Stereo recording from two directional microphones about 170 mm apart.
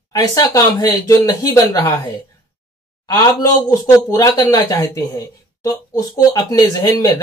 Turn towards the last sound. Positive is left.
turn(degrees=20)  # may be behind; listen again after turning